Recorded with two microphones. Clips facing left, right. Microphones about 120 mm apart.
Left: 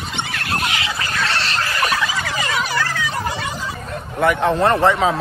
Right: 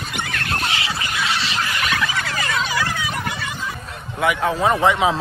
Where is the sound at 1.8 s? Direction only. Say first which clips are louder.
Left 4 dB; 35° left (ahead or behind).